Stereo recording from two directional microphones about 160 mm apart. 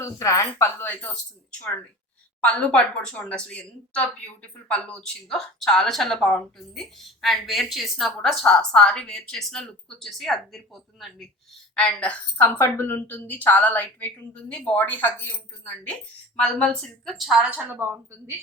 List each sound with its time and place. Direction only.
0.0 s a woman's voice: 20° left (ahead or behind)
2.4 s a woman's voice: 5° left (ahead or behind)
11.7 s a woman's voice: 5° left (ahead or behind); by 18.3 s 15° right (ahead or behind)